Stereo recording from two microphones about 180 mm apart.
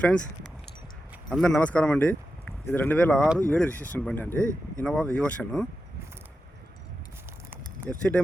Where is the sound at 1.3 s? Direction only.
5° left (ahead or behind).